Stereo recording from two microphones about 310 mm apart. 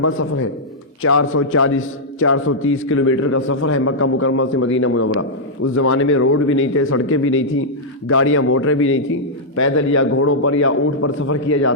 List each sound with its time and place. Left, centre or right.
0.0 s a man's voice: left